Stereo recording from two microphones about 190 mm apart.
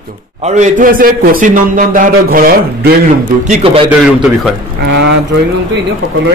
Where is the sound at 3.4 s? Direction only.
35° right (ahead or behind).